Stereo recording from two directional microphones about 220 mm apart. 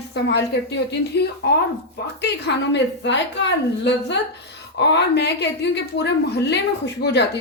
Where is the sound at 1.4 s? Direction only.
50° left (ahead or behind).